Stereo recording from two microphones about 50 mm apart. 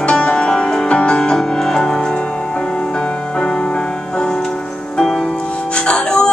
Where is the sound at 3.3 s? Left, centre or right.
Centre.